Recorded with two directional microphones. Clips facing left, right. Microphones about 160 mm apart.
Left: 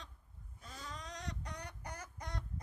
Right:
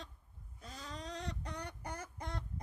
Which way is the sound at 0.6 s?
35° right (ahead or behind).